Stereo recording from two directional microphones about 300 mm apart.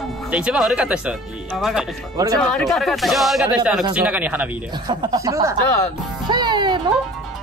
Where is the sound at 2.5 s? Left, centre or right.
Centre.